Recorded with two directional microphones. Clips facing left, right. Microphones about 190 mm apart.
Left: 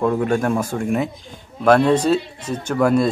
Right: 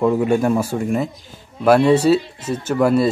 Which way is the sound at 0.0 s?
5° right (ahead or behind).